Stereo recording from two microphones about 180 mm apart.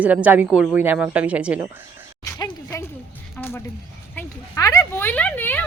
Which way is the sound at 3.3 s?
10° left (ahead or behind).